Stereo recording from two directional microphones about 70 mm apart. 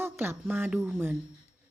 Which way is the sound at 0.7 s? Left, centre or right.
Centre.